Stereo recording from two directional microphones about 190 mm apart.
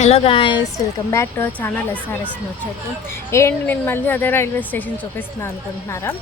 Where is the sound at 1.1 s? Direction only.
15° left (ahead or behind).